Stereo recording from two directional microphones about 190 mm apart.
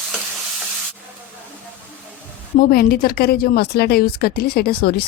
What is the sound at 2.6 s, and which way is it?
A woman's voice, 50° left (ahead or behind).